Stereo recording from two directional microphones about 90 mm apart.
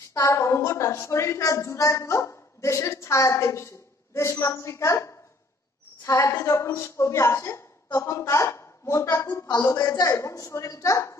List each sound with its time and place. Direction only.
0.1 s a woman's voice: 35° left (ahead or behind)